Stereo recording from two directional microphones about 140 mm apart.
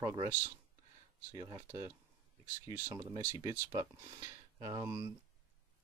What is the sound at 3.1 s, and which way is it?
Speech, 30° right (ahead or behind).